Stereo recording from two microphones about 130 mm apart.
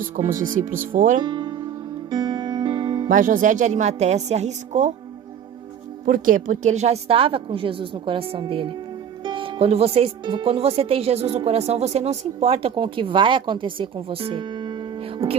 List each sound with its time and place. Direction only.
0.9 s speech: 90° right
1.2 s music: 35° right (ahead or behind)
3.1 s a woman's voice: 90° right; by 4.9 s 60° right (ahead or behind)
6.1 s speech: 90° right; by 14.8 s 35° right (ahead or behind)